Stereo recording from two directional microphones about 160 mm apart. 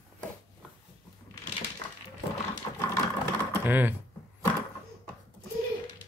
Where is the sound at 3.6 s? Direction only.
10° right (ahead or behind).